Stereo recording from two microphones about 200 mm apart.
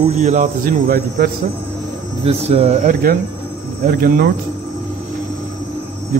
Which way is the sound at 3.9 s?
50° right (ahead or behind).